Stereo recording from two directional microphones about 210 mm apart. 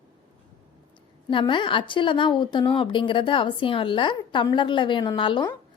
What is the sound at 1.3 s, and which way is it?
A woman's voice, 25° left (ahead or behind).